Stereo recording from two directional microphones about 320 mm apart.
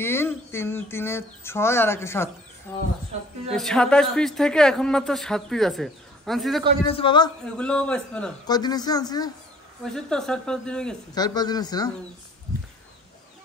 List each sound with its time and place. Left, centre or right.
0.0 s speech: centre
6.9 s speech: centre
7.4 s speech: centre